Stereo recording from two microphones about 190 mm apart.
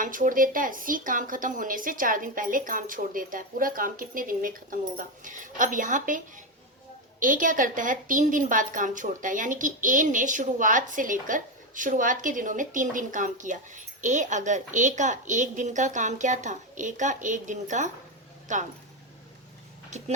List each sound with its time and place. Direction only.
0.0 s a woman's voice: 45° right (ahead or behind)
19.9 s speech: 35° right (ahead or behind)